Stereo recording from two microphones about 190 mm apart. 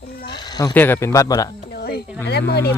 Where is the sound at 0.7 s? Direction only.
10° left (ahead or behind).